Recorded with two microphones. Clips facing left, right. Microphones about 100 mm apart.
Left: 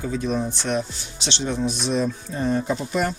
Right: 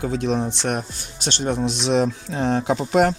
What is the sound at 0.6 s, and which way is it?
Speech, 50° right (ahead or behind).